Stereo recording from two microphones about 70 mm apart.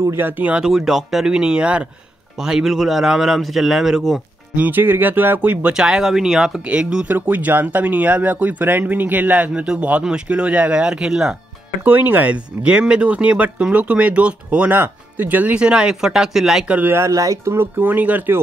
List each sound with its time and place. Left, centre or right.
0.0 s speech: right
0.3 s speech: right
0.7 s a man's voice: centre
4.6 s speech: right
5.8 s speech: centre
6.6 s speech: centre
11.8 s speech: right; by 16.6 s centre
16.6 s speech: right
16.9 s speech: right
17.6 s speech: right